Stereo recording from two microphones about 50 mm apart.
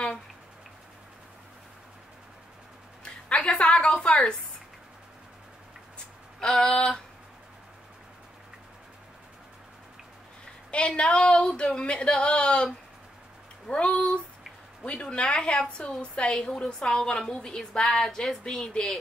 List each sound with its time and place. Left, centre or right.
3.0 s a sound: centre
4.0 s a woman's voice: centre
6.4 s a woman's voice: centre
10.7 s speech: left
13.7 s a woman's voice: left